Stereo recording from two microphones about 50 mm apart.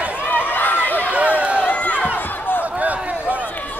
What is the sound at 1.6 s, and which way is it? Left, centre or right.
Run, left.